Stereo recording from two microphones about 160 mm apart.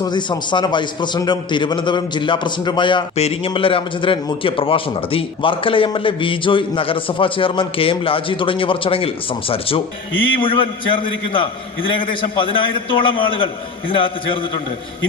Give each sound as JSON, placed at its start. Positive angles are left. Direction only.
{"t": 0.0, "sound": "a man's voice", "side_deg": 30}